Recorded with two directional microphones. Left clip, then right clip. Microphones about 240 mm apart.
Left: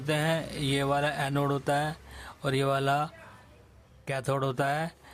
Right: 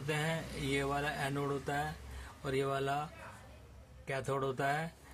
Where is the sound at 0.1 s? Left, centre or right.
Left.